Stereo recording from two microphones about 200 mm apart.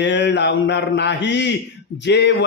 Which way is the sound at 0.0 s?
60° left (ahead or behind).